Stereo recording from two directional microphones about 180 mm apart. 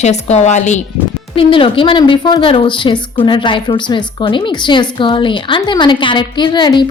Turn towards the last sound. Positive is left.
turn(degrees=25)  # may be behind; listen again after turning